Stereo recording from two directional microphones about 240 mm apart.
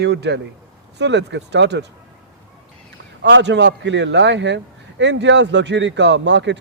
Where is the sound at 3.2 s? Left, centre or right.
Right.